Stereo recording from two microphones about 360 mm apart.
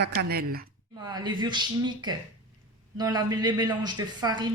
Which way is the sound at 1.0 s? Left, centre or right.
Centre.